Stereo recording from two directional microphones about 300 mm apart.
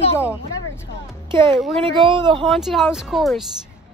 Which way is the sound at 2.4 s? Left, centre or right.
Centre.